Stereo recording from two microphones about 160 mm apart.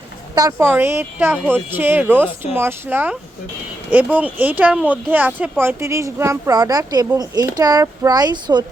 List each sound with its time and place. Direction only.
0.3 s speech: 20° right (ahead or behind)